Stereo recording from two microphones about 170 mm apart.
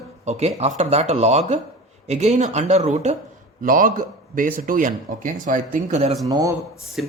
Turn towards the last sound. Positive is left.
turn(degrees=0)  # may be behind; listen again after turning